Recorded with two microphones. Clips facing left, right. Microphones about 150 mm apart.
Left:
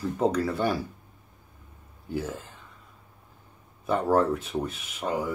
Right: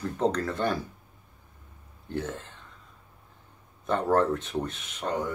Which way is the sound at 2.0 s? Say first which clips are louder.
Left 1 dB; 5° left (ahead or behind).